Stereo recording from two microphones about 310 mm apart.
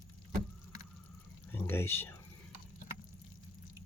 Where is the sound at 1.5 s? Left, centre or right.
Centre.